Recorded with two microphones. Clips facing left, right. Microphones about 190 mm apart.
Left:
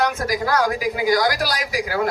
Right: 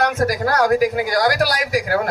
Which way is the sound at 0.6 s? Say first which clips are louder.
Right 5 dB; 55° right (ahead or behind).